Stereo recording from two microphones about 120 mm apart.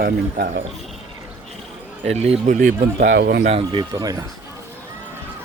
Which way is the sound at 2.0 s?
60° right (ahead or behind).